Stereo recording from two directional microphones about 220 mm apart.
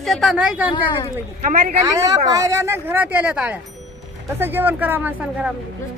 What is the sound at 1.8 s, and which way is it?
Speech, 15° right (ahead or behind).